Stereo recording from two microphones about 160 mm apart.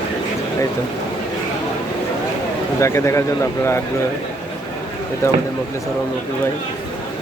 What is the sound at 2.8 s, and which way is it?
Speech, 20° left (ahead or behind).